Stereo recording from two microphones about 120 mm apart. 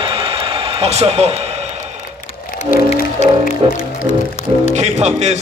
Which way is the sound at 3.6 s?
55° right (ahead or behind).